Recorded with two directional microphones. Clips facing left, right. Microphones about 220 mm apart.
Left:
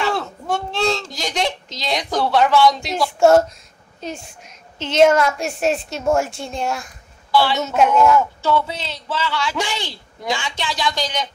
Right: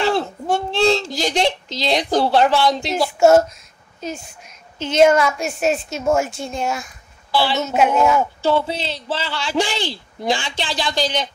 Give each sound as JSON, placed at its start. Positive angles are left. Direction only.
{"t": 0.0, "sound": "a sound", "side_deg": -30}
{"t": 3.2, "sound": "a woman's voice", "side_deg": -5}
{"t": 4.8, "sound": "a woman's voice", "side_deg": 0}
{"t": 7.2, "sound": "a woman's voice", "side_deg": -30}
{"t": 7.5, "sound": "a woman's voice", "side_deg": -5}
{"t": 8.2, "sound": "a man's voice", "side_deg": -30}